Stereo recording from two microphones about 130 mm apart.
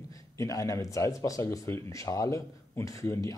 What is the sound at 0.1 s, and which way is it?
Speech, 25° left (ahead or behind).